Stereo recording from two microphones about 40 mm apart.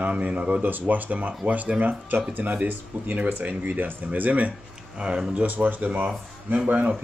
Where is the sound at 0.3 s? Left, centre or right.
Right.